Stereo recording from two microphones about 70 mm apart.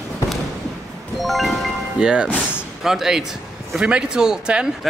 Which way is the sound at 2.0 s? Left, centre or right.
Centre.